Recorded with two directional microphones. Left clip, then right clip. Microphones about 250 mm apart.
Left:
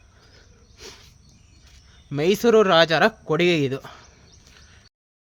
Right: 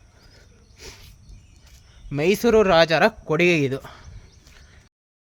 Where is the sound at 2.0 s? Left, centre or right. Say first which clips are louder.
Left 1 dB; centre.